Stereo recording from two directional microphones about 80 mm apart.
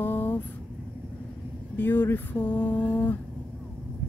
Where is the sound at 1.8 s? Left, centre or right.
Left.